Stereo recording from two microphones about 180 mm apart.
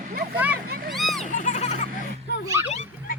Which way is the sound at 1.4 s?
40° left (ahead or behind).